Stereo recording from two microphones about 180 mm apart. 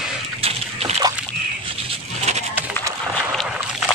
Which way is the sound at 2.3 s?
35° right (ahead or behind).